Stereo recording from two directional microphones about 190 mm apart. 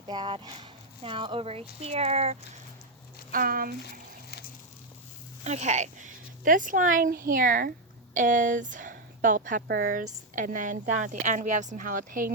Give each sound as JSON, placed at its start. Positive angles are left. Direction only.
{"t": 0.1, "sound": "speech", "side_deg": -25}
{"t": 3.3, "sound": "speech", "side_deg": -50}
{"t": 3.8, "sound": "a sound", "side_deg": 60}
{"t": 5.4, "sound": "speech", "side_deg": -35}